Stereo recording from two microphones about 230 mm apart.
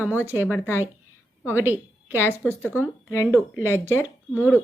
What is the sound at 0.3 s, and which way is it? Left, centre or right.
Speech, centre.